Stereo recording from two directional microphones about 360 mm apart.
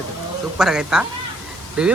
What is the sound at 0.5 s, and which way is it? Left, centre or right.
Speech, centre.